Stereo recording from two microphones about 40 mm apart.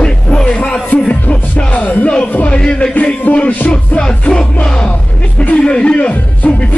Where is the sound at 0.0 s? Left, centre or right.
Left.